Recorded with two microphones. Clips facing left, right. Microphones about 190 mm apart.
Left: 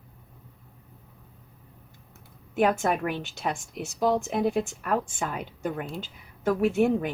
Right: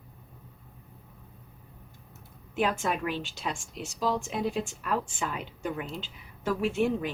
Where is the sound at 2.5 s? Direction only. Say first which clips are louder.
Left 5 dB; 50° left (ahead or behind).